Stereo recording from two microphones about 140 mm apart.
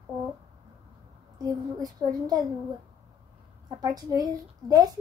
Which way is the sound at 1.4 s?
25° right (ahead or behind).